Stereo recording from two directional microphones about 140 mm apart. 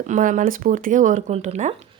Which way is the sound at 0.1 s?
65° right (ahead or behind).